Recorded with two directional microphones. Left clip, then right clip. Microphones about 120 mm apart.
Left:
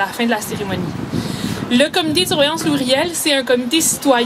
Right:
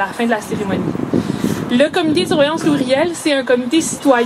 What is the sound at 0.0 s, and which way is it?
A woman's voice, 45° left (ahead or behind).